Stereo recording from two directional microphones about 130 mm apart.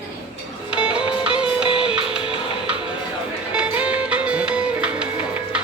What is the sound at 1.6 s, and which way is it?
Music, 40° left (ahead or behind).